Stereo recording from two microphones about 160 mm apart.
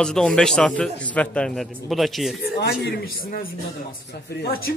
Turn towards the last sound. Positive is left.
turn(degrees=70)  # may be behind; listen again after turning